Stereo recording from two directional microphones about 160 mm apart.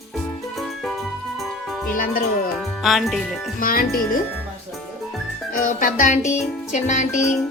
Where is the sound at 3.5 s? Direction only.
65° left (ahead or behind).